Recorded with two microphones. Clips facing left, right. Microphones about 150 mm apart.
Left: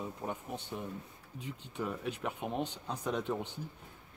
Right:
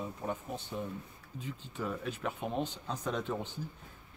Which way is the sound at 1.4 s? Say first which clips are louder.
Even; 15° left (ahead or behind).